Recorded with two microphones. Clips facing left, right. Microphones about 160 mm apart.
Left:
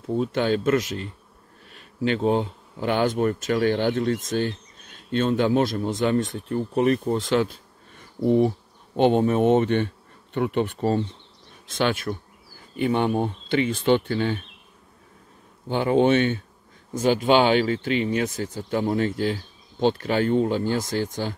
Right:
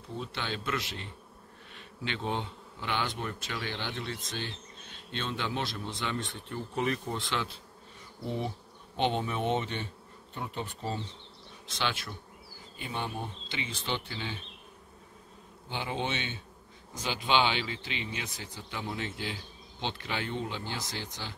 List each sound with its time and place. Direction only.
0.2 s speech: 45° left (ahead or behind)
8.9 s speech: 45° left (ahead or behind)
10.3 s speech: 70° left (ahead or behind); by 12.2 s 50° left (ahead or behind)
12.7 s speech: 65° left (ahead or behind)
15.7 s speech: 50° left (ahead or behind)